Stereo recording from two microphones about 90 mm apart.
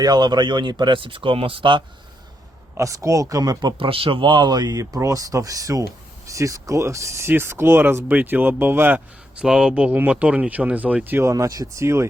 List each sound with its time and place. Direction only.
0.0 s speech: 50° right (ahead or behind); by 1.8 s 70° right (ahead or behind)
2.7 s speech: 35° right (ahead or behind)
3.8 s speech: 90° right; by 9.0 s 25° right (ahead or behind)
9.3 s speech: 10° right (ahead or behind); by 12.0 s 30° right (ahead or behind)